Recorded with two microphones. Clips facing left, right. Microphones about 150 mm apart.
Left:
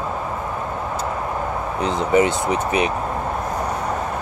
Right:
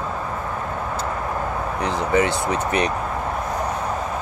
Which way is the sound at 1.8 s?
20° left (ahead or behind).